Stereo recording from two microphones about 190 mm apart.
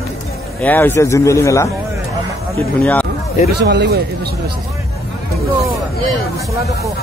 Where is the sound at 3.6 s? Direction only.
65° right (ahead or behind).